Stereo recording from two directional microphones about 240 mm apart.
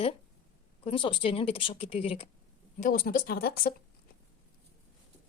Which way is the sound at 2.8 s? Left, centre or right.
Left.